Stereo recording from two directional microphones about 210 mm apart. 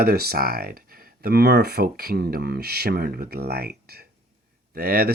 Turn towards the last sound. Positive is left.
turn(degrees=-45)  # may be behind; listen again after turning